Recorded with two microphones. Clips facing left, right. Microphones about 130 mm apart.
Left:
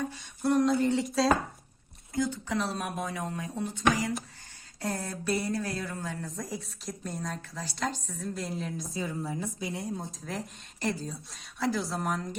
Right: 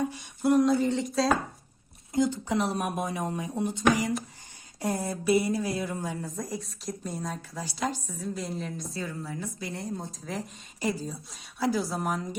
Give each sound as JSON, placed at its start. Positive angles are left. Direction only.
{"t": 0.4, "sound": "a woman's voice", "side_deg": 0}
{"t": 2.1, "sound": "speech", "side_deg": -20}
{"t": 6.2, "sound": "a woman's voice", "side_deg": 0}
{"t": 8.9, "sound": "a woman's voice", "side_deg": 20}
{"t": 9.7, "sound": "a woman's voice", "side_deg": 0}